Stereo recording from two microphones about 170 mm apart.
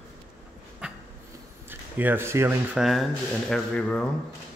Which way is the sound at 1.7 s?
10° right (ahead or behind).